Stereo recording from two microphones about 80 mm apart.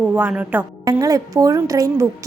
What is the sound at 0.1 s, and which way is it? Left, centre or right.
Speech, centre.